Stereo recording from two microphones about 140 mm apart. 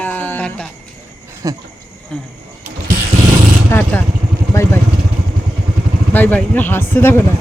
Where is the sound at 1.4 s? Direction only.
25° right (ahead or behind).